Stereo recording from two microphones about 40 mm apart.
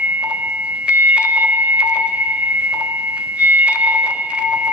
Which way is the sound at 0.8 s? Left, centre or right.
Right.